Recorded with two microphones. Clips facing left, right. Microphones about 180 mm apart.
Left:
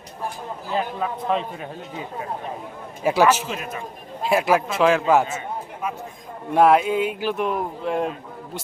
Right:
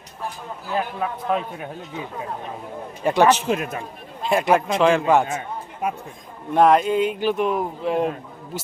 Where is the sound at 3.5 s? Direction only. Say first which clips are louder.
Right 7 dB; 50° right (ahead or behind).